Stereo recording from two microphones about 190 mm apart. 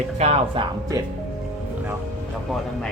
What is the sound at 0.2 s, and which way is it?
Speech, 35° right (ahead or behind).